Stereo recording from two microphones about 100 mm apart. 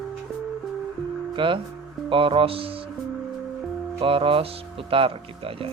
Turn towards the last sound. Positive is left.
turn(degrees=-65)  # may be behind; listen again after turning